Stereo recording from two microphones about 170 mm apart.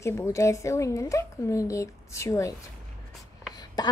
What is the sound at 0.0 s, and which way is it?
A woman's voice, 15° left (ahead or behind).